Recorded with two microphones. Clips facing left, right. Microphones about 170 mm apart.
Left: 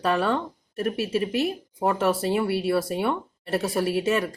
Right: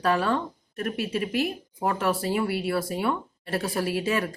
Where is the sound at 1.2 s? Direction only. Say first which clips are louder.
Left 2 dB; 25° left (ahead or behind).